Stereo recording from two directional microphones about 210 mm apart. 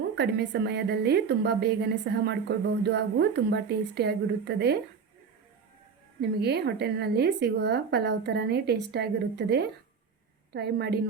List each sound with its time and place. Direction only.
0.2 s a woman's voice: 50° right (ahead or behind)
6.4 s a woman's voice: 50° right (ahead or behind)